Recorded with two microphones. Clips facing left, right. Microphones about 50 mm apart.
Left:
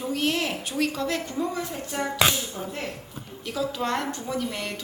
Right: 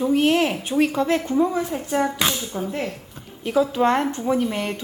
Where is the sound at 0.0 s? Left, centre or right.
Right.